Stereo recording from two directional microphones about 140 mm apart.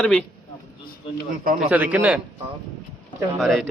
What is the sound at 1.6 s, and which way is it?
Speech, 10° right (ahead or behind).